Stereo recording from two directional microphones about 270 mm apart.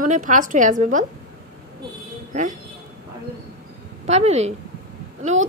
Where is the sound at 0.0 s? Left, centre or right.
Right.